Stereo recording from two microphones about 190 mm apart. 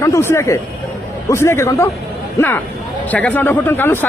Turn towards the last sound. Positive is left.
turn(degrees=10)  # may be behind; listen again after turning